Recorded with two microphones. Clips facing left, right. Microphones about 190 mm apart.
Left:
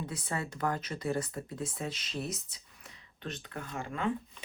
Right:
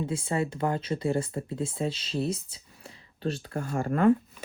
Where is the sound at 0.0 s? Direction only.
25° right (ahead or behind).